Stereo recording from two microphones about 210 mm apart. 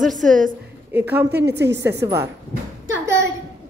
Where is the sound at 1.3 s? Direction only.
55° right (ahead or behind).